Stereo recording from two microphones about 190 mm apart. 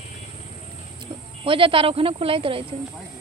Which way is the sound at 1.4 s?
30° right (ahead or behind).